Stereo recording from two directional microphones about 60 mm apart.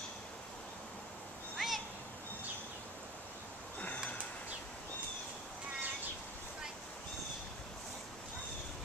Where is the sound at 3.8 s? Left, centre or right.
Left.